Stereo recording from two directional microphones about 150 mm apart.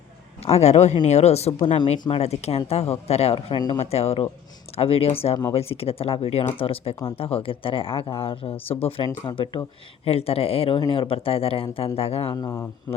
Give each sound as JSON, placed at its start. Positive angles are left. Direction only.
{"t": 0.4, "sound": "speech", "side_deg": 45}
{"t": 12.3, "sound": "speech", "side_deg": 25}